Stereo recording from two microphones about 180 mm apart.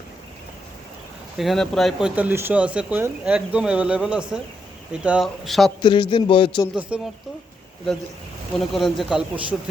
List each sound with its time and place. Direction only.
1.4 s speech: centre (ahead or behind)
5.8 s a man's voice: 25° left (ahead or behind)
6.7 s speech: 5° right (ahead or behind)
8.5 s speech: centre (ahead or behind)